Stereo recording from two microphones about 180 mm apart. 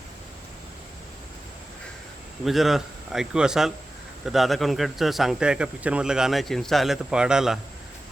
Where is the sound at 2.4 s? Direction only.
Centre (ahead or behind).